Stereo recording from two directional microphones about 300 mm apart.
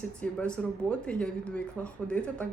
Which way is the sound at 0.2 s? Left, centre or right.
Centre.